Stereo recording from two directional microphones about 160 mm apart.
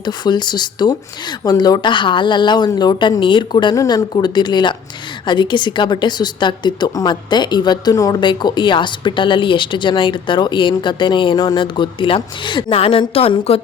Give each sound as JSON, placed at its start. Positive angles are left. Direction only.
{"t": 0.0, "sound": "a woman's voice", "side_deg": 25}